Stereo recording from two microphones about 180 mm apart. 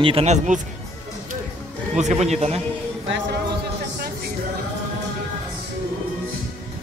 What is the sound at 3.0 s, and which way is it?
Speech, 90° right.